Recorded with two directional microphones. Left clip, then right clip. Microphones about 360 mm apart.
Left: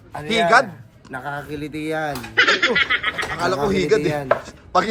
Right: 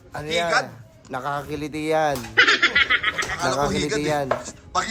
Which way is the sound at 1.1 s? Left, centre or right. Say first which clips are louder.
Right 1 dB; centre.